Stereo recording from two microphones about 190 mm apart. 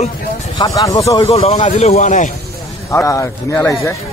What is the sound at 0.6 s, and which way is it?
Speech, 15° left (ahead or behind).